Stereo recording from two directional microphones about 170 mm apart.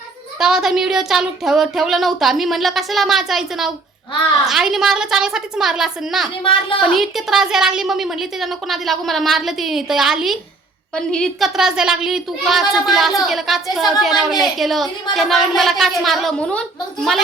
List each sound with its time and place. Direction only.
0.3 s a woman's voice: 5° right (ahead or behind)
6.4 s a woman's voice: 30° left (ahead or behind)
6.8 s a woman's voice: centre (ahead or behind)